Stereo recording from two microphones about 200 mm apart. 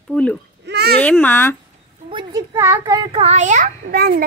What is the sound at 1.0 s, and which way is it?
Speech, 5° left (ahead or behind).